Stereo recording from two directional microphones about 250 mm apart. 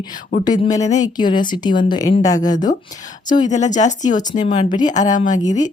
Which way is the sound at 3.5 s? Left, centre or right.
Left.